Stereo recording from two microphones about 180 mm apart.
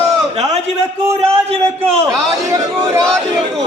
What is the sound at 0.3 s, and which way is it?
A man's voice, 40° right (ahead or behind).